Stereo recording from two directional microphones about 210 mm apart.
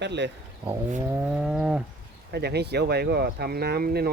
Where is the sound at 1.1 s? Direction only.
5° right (ahead or behind).